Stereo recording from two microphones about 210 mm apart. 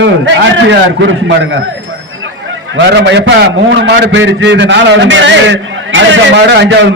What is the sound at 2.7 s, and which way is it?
A man's voice, 55° right (ahead or behind).